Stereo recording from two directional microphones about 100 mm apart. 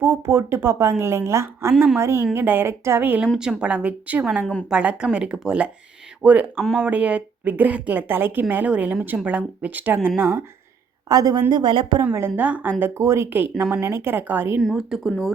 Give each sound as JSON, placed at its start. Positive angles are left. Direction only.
{"t": 0.0, "sound": "a woman's voice", "side_deg": -20}
{"t": 1.7, "sound": "speech", "side_deg": 0}
{"t": 2.0, "sound": "a woman's voice", "side_deg": -25}
{"t": 11.1, "sound": "a woman's voice", "side_deg": -40}
{"t": 12.4, "sound": "a woman's voice", "side_deg": -15}
{"t": 12.8, "sound": "a woman's voice", "side_deg": -25}
{"t": 14.8, "sound": "speech", "side_deg": -5}